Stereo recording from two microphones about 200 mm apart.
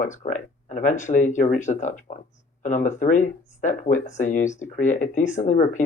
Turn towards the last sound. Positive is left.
turn(degrees=40)  # may be behind; listen again after turning